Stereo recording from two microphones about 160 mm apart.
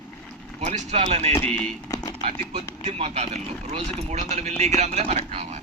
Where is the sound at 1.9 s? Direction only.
20° left (ahead or behind).